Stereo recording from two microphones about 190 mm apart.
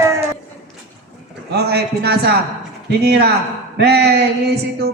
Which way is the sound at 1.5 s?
60° right (ahead or behind).